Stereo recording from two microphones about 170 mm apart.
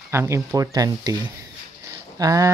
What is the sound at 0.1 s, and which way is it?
Speech, 15° right (ahead or behind).